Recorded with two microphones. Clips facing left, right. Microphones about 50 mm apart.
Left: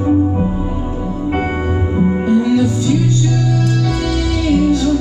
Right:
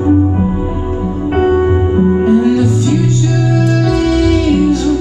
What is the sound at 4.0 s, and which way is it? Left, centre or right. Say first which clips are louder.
Music: right 7 dB; right.